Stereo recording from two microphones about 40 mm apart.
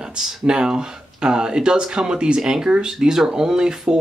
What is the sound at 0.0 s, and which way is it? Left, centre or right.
Speech, centre.